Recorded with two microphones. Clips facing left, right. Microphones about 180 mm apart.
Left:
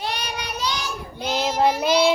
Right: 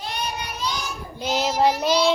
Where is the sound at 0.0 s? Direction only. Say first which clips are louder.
Left 1 dB; 70° left (ahead or behind).